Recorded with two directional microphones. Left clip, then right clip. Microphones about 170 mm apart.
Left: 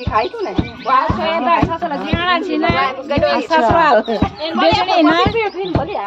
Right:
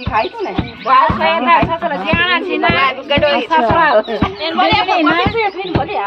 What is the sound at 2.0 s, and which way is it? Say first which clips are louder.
Speech: right 3 dB; 90° left.